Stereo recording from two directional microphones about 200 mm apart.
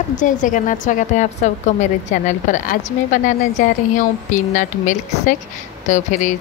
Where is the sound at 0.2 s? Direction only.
40° left (ahead or behind).